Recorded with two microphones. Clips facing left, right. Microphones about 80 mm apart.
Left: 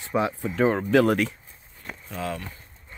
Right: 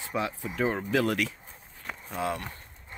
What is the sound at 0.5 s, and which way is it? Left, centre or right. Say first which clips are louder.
Speech: left 7 dB; left.